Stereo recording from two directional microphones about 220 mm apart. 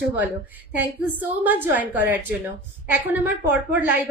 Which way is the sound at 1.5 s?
10° right (ahead or behind).